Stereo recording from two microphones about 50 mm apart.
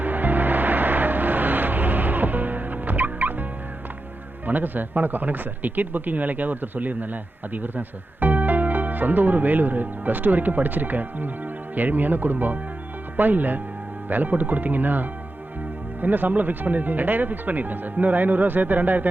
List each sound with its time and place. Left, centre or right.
0.0 s music: right
4.4 s speech: right